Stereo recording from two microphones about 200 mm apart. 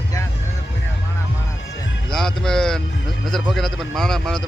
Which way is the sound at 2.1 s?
Centre (ahead or behind).